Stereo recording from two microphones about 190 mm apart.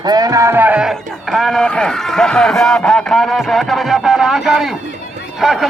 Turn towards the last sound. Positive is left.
turn(degrees=0)  # may be behind; listen again after turning